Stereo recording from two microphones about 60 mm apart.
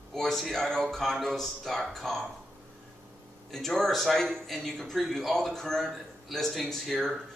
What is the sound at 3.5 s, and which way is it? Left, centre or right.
A man's voice, centre.